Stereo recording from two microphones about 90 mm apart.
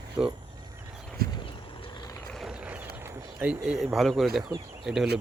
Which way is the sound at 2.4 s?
10° right (ahead or behind).